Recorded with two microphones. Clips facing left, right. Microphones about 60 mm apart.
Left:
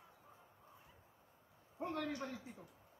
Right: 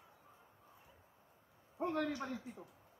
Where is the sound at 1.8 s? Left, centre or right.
Centre.